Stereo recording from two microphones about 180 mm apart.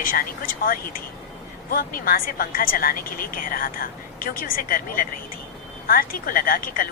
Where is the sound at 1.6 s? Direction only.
55° left (ahead or behind).